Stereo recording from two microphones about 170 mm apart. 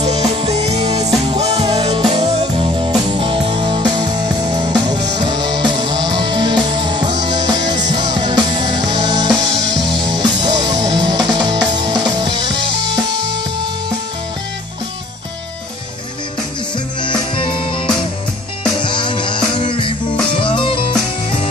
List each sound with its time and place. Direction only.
0.0 s music: 40° right (ahead or behind)
1.6 s music: 25° right (ahead or behind)
1.9 s music: 35° right (ahead or behind)
17.4 s music: 30° left (ahead or behind)
18.8 s music: 30° left (ahead or behind)